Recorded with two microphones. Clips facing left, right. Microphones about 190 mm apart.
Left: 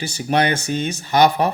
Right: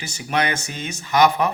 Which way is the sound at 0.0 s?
35° left (ahead or behind).